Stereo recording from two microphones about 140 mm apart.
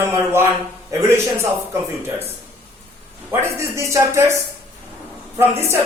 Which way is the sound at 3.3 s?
20° right (ahead or behind).